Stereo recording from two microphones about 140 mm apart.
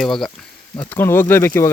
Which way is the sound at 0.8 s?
15° left (ahead or behind).